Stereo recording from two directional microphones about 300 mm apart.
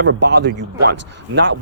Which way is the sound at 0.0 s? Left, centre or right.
Right.